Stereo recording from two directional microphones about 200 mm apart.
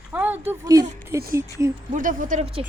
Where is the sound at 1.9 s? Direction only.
40° right (ahead or behind).